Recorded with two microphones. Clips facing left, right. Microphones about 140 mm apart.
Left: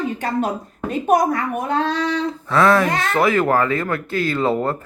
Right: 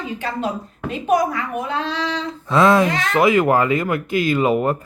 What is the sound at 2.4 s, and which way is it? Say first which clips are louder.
Speech: right 2 dB; 20° right (ahead or behind).